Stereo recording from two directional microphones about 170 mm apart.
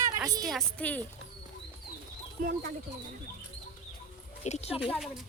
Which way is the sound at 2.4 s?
55° right (ahead or behind).